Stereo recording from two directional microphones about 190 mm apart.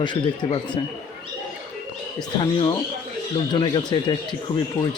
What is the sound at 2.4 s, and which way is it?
Speech, 25° left (ahead or behind).